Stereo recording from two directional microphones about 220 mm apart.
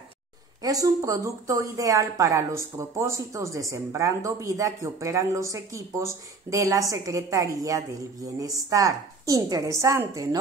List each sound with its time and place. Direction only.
0.6 s a woman's voice: 15° right (ahead or behind)